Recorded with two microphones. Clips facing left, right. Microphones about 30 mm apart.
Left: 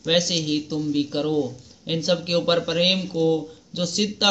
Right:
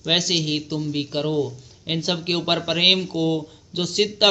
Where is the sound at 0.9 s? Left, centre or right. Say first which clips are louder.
Left 2 dB; right.